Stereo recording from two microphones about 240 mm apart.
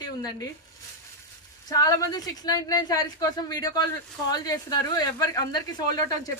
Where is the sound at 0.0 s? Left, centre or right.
Centre.